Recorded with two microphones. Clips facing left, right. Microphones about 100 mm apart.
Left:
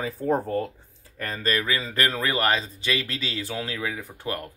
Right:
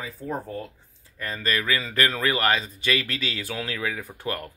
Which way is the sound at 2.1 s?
20° left (ahead or behind).